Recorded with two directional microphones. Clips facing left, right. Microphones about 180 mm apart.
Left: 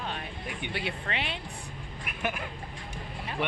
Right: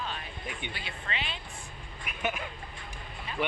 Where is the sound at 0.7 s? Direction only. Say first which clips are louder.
Left 5 dB; 65° left (ahead or behind).